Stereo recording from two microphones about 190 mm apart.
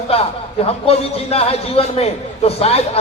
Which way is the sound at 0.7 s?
30° left (ahead or behind).